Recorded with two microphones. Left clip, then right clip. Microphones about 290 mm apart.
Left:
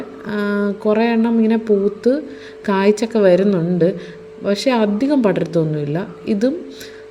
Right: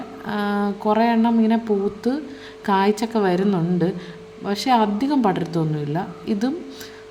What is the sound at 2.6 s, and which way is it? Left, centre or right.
Speech, centre.